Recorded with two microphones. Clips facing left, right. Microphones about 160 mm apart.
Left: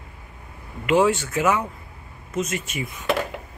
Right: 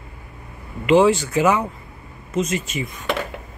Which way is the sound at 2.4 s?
55° left (ahead or behind).